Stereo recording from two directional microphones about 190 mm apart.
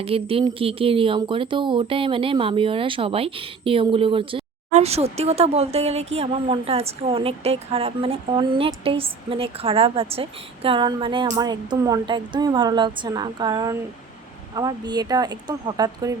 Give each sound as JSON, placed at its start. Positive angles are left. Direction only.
{"t": 0.0, "sound": "speech", "side_deg": -30}